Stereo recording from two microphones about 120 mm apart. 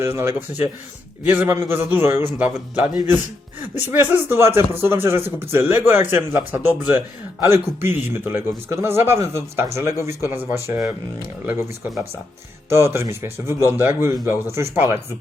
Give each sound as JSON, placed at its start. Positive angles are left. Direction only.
{"t": 0.0, "sound": "a man's voice", "side_deg": -20}
{"t": 12.7, "sound": "a man's voice", "side_deg": -20}